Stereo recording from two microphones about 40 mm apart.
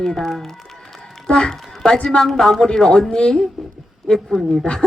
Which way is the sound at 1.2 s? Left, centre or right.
Centre.